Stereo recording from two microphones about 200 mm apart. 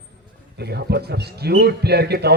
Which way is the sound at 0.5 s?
55° right (ahead or behind).